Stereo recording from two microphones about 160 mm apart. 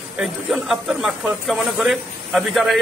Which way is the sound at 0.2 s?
Centre (ahead or behind).